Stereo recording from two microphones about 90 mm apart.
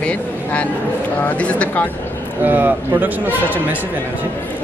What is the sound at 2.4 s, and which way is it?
Speech, 20° right (ahead or behind).